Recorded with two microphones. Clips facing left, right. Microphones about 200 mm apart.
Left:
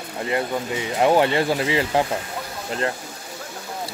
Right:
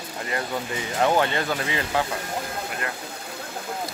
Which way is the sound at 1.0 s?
20° left (ahead or behind).